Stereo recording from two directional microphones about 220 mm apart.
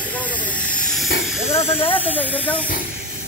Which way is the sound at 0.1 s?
5° left (ahead or behind).